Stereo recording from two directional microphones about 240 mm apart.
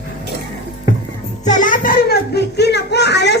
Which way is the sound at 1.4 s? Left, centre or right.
Left.